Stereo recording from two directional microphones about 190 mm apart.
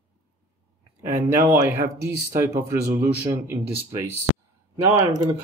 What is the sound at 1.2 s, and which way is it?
Speech, 10° right (ahead or behind).